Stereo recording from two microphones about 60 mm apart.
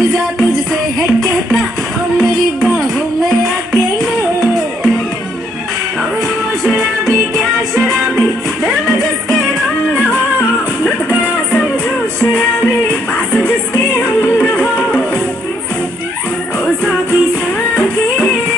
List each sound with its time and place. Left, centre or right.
3.7 s music: centre
6.6 s music: centre
14.4 s music: centre
17.7 s music: left